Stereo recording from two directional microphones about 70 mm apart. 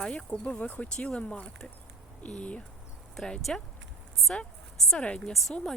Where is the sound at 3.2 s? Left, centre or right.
Centre.